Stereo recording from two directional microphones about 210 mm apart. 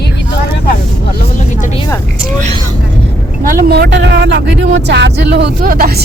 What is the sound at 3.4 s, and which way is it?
Speech, 40° right (ahead or behind).